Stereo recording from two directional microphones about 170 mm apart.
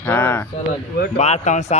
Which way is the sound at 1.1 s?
40° left (ahead or behind).